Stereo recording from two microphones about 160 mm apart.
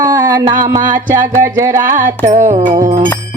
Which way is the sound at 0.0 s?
20° right (ahead or behind).